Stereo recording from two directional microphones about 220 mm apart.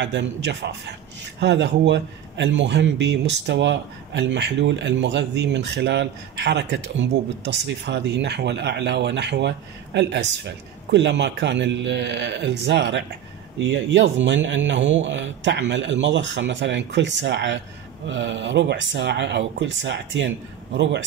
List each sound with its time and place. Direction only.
0.0 s a man's voice: 55° right (ahead or behind)